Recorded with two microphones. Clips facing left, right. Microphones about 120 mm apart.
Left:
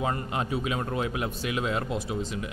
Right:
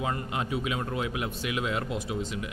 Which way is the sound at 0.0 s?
35° left (ahead or behind).